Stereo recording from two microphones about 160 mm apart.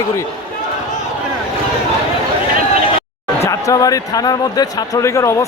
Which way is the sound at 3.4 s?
20° left (ahead or behind).